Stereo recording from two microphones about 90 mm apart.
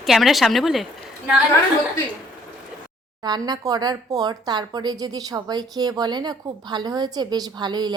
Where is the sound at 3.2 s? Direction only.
50° right (ahead or behind).